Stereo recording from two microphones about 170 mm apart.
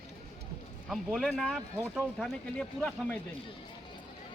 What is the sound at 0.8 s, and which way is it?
Speech, centre (ahead or behind).